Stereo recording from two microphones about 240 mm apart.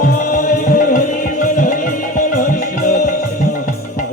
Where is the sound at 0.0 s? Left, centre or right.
Left.